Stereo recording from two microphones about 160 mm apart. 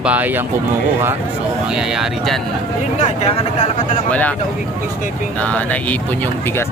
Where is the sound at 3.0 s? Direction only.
40° left (ahead or behind).